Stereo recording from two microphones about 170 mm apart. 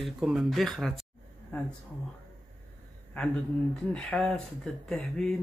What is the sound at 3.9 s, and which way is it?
Speech, 5° left (ahead or behind).